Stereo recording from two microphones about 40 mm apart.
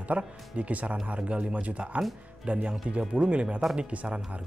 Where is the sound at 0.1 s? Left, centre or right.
Right.